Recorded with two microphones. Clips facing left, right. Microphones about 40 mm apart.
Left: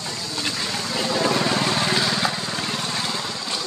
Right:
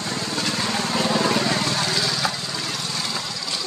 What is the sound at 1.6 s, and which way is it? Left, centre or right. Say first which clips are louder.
Vehicle: left 2 dB; left.